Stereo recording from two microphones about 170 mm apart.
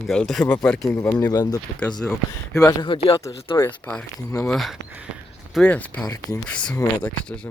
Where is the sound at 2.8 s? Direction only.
30° left (ahead or behind).